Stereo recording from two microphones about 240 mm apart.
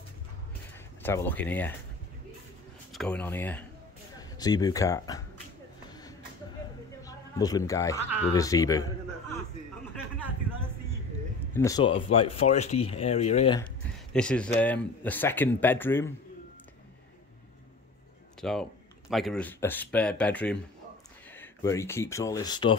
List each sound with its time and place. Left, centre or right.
1.0 s speech: centre
2.9 s speech: centre
7.1 s speech: centre
11.5 s speech: centre
14.1 s speech: centre
18.4 s speech: centre